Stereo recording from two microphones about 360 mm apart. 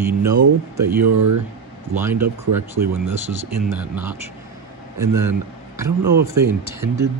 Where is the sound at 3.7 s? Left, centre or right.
Centre.